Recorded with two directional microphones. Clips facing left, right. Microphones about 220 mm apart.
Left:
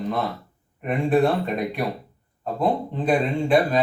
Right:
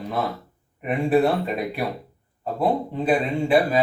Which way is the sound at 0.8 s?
5° right (ahead or behind).